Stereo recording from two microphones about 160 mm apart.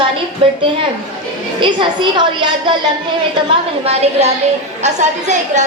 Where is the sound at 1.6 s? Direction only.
30° right (ahead or behind).